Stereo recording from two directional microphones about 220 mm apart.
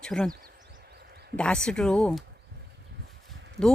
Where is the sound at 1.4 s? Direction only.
5° left (ahead or behind).